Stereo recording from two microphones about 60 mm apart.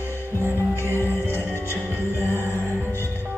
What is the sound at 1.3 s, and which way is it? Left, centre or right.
Music, left.